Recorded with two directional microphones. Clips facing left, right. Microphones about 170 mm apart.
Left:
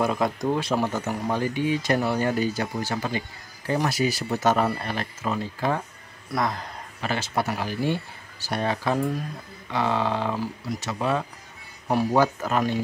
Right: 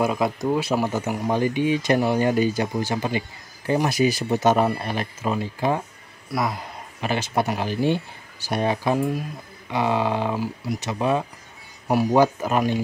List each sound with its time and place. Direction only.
0.0 s speech: 5° right (ahead or behind)